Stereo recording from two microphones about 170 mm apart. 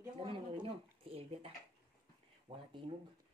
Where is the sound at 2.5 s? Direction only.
30° right (ahead or behind).